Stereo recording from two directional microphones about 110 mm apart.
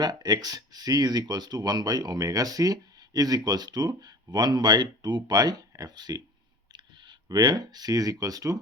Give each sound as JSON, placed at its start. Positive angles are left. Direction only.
{"t": 0.0, "sound": "speech", "side_deg": -40}